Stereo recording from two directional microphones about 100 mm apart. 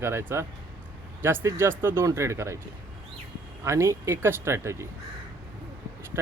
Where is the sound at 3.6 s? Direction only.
30° right (ahead or behind).